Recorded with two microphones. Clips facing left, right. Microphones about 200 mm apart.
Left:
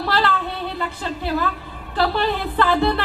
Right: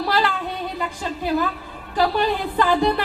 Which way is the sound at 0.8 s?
15° right (ahead or behind).